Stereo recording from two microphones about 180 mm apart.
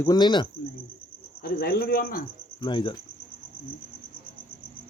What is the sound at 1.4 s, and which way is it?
Speech, 60° left (ahead or behind).